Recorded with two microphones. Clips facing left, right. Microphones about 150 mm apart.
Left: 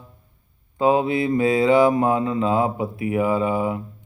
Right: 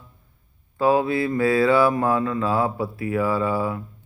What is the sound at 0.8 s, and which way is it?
Mantra, 20° left (ahead or behind).